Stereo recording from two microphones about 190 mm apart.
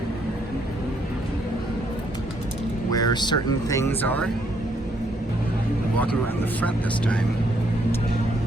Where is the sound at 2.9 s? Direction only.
20° left (ahead or behind).